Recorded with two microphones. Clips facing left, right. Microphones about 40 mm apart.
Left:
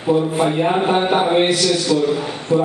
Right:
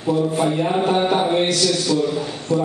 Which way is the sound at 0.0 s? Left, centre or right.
Left.